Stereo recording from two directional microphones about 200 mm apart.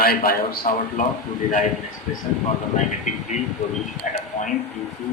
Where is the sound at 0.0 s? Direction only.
45° left (ahead or behind).